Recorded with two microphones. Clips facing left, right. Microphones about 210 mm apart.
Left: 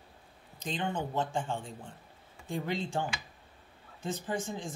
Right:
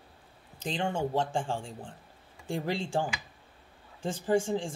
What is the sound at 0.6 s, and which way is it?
Speech, 30° right (ahead or behind).